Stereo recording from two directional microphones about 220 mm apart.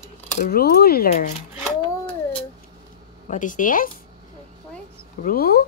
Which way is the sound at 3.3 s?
35° left (ahead or behind).